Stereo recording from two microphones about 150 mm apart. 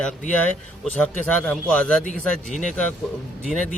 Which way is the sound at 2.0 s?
60° left (ahead or behind).